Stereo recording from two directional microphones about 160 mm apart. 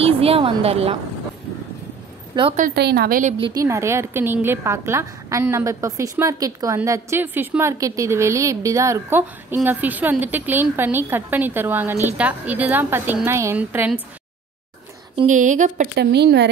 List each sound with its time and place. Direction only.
0.0 s a sound: 35° right (ahead or behind)
2.3 s a woman's voice: 25° right (ahead or behind)
2.7 s speech: 90° right
3.3 s a woman's voice: 30° right (ahead or behind)
3.6 s a woman's voice: 15° right (ahead or behind)
15.2 s speech: 50° right (ahead or behind)
15.9 s speech: 90° right